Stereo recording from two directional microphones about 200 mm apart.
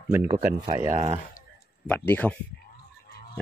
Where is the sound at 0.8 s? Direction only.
30° right (ahead or behind).